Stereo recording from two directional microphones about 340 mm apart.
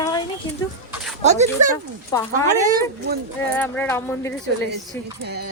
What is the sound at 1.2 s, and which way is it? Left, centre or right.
Speech, centre.